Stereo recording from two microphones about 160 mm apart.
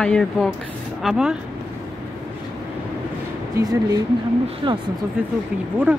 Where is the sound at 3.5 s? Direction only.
25° right (ahead or behind).